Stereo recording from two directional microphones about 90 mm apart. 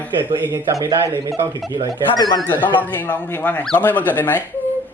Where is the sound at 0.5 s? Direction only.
35° right (ahead or behind).